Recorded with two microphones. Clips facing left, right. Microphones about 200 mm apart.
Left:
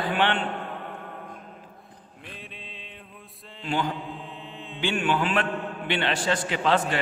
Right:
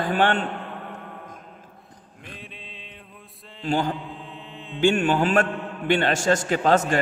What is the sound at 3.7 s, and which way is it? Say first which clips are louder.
Speech: right 4 dB; 40° right (ahead or behind).